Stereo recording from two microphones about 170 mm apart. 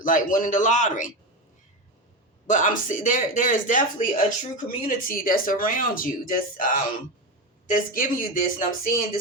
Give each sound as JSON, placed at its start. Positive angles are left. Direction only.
{"t": 0.0, "sound": "speech", "side_deg": 50}
{"t": 2.5, "sound": "speech", "side_deg": 50}
{"t": 7.7, "sound": "speech", "side_deg": 55}